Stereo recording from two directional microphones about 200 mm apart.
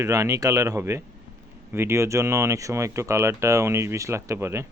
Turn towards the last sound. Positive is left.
turn(degrees=-15)  # may be behind; listen again after turning